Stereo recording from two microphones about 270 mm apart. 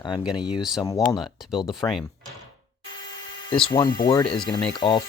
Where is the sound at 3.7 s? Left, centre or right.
Centre.